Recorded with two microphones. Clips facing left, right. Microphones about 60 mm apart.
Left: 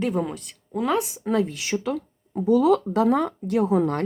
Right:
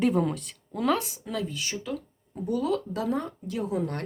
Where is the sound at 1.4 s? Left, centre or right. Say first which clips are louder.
Left 7 dB; left.